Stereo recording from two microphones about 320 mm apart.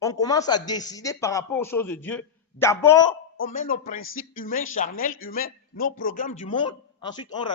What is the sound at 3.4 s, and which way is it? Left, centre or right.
A man's voice, left.